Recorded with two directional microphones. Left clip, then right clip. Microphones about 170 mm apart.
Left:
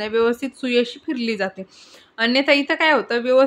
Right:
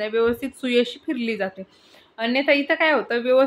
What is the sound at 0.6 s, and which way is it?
A woman's voice, 15° left (ahead or behind).